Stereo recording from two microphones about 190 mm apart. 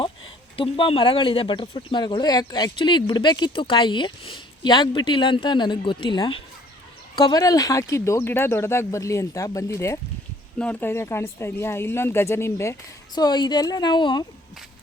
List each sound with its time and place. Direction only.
0.5 s speech: 30° left (ahead or behind)